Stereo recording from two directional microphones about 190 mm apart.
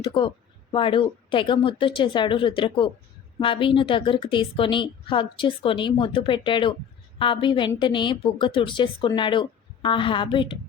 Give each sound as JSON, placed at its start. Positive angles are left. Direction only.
{"t": 0.0, "sound": "a woman's voice", "side_deg": 25}